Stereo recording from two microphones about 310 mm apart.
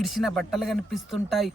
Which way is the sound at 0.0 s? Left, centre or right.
Centre.